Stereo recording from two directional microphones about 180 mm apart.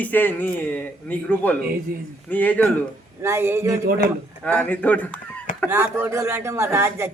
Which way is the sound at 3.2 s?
15° right (ahead or behind).